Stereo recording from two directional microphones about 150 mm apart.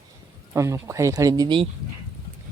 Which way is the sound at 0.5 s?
20° right (ahead or behind).